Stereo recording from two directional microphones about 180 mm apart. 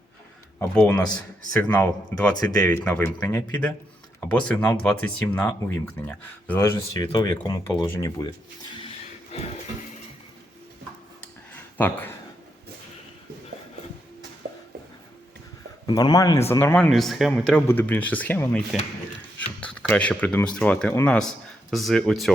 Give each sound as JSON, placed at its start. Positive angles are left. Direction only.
{"t": 0.7, "sound": "speech", "side_deg": 5}
{"t": 7.0, "sound": "speech", "side_deg": 25}
{"t": 9.3, "sound": "music", "side_deg": 35}
{"t": 11.8, "sound": "speech", "side_deg": 10}
{"t": 15.9, "sound": "speech", "side_deg": 25}